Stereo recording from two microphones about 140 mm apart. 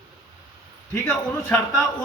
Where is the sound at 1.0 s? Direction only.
10° left (ahead or behind).